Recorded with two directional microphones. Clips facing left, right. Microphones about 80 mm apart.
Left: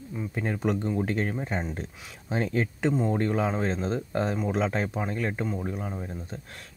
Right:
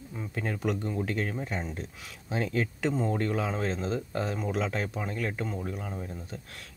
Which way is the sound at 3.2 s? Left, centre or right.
Left.